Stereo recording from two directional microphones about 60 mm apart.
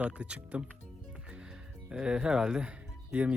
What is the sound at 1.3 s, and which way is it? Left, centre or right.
Music, centre.